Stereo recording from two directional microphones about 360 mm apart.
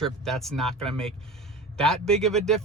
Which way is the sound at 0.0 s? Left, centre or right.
Centre.